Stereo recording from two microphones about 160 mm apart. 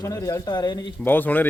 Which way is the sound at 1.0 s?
10° left (ahead or behind).